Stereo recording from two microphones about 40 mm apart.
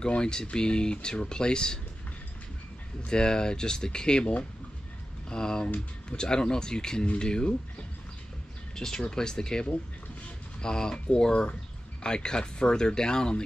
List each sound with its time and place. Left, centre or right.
0.0 s speech: centre
3.1 s speech: centre
5.3 s speech: centre
8.7 s speech: centre